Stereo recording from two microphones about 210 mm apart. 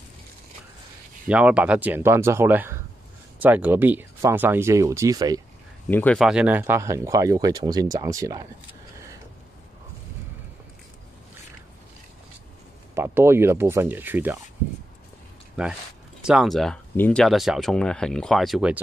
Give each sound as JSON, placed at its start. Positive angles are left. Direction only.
{"t": 1.2, "sound": "speech", "side_deg": -5}
{"t": 5.9, "sound": "speech", "side_deg": 10}
{"t": 12.9, "sound": "speech", "side_deg": -10}
{"t": 15.6, "sound": "speech", "side_deg": -5}